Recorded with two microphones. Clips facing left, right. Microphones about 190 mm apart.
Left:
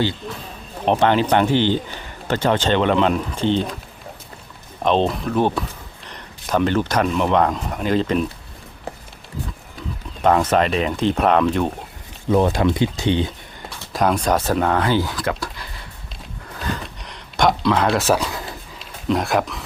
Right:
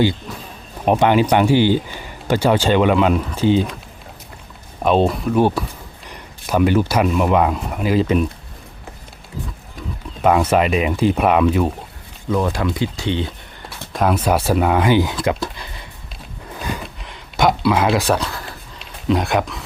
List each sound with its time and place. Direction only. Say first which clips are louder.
0.9 s speech: right 2 dB; 10° right (ahead or behind)
4.8 s speech: right 2 dB; 5° right (ahead or behind)
10.2 s speech: right 1 dB; 10° right (ahead or behind)
12.3 s speech: left 3 dB; 25° left (ahead or behind)
13.9 s speech: right 1 dB; 5° right (ahead or behind)
16.6 s a sound: even; 10° right (ahead or behind)
18.8 s speech: right 2 dB; centre (ahead or behind)